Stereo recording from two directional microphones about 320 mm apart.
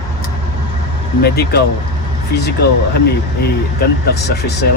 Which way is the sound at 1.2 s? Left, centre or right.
Left.